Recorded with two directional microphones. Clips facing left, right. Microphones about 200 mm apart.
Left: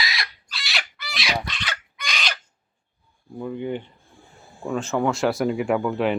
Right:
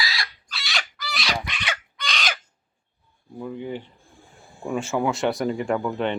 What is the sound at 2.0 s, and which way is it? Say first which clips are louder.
Crow: right 1 dB; 10° left (ahead or behind).